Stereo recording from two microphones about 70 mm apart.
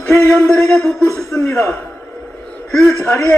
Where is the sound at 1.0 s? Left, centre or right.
Right.